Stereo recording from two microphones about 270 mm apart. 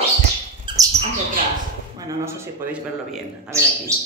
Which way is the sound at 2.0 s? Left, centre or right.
Centre.